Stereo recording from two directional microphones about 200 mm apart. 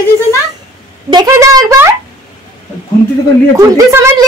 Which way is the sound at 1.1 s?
15° right (ahead or behind).